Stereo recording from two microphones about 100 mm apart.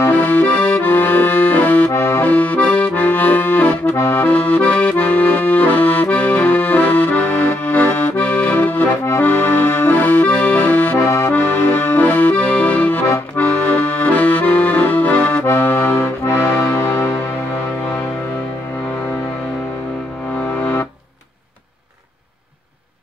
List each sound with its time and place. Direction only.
0.0 s accordion: 20° left (ahead or behind)